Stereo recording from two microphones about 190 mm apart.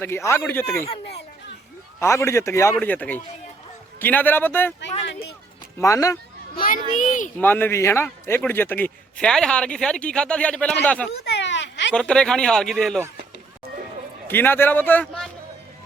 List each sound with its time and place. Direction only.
0.0 s a man's voice: 15° left (ahead or behind)
2.0 s a man's voice: 15° left (ahead or behind)
5.8 s a man's voice: 15° left (ahead or behind)
6.6 s a child's voice: 45° left (ahead or behind)
7.3 s a man's voice: 10° left (ahead or behind)
11.1 s a sound: 65° left (ahead or behind)
11.9 s a man's voice: 5° left (ahead or behind)
14.3 s a man's voice: 10° left (ahead or behind)